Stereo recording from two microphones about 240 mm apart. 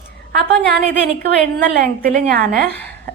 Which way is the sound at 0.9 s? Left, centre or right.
Right.